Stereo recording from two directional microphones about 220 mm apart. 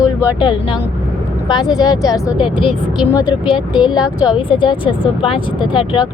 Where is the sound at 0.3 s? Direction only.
20° left (ahead or behind).